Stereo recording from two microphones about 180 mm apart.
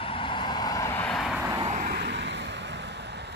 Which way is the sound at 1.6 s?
50° right (ahead or behind).